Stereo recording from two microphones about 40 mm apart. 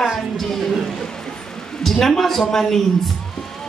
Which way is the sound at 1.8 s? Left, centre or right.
Centre.